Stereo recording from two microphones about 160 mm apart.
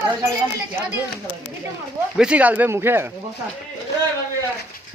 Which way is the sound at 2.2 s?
5° right (ahead or behind).